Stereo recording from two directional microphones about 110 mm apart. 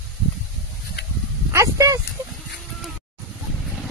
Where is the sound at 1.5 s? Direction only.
30° right (ahead or behind).